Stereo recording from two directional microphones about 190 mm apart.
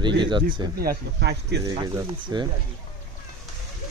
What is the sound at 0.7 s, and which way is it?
Speech, 60° right (ahead or behind).